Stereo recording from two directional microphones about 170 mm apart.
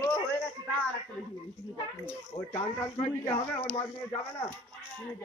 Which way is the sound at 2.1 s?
15° left (ahead or behind).